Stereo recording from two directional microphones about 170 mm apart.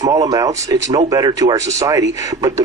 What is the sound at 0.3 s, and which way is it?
Speech, 20° right (ahead or behind).